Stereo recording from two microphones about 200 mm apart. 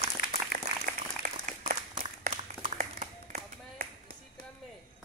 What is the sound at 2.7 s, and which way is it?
Clapping, 45° right (ahead or behind).